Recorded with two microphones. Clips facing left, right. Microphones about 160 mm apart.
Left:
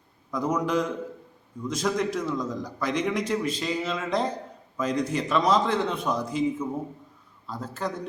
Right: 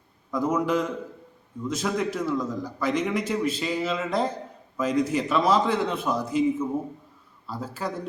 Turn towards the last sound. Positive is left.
turn(degrees=-5)  # may be behind; listen again after turning